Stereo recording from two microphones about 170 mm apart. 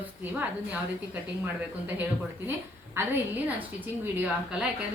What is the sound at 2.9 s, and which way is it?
A woman's voice, 10° right (ahead or behind).